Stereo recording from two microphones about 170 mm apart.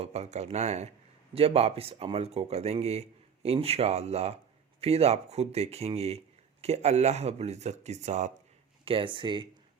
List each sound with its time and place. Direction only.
0.0 s a man's voice: 40° right (ahead or behind)
8.8 s speech: 30° right (ahead or behind)